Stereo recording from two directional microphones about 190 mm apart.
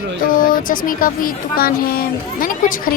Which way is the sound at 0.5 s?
45° left (ahead or behind).